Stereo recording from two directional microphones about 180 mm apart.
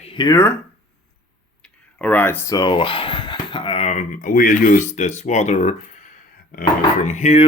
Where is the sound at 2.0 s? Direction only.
10° left (ahead or behind).